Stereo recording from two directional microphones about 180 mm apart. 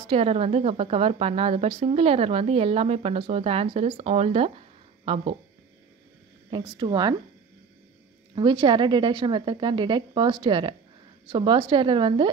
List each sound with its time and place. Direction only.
0.1 s a woman's voice: 35° right (ahead or behind)
6.5 s a woman's voice: 20° right (ahead or behind)
8.4 s a woman's voice: 25° right (ahead or behind)